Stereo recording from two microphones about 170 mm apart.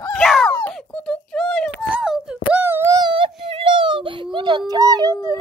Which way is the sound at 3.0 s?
30° right (ahead or behind).